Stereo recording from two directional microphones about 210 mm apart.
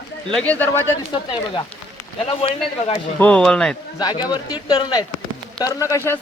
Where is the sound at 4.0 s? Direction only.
20° left (ahead or behind).